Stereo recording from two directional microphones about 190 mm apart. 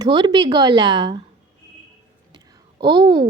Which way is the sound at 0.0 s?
20° right (ahead or behind).